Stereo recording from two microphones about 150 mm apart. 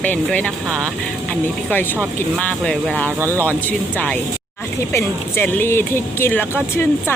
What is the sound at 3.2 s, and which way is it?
Speech, 15° right (ahead or behind).